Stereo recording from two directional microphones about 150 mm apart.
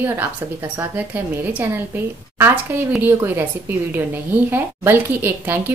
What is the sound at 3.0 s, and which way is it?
Speech, 15° right (ahead or behind).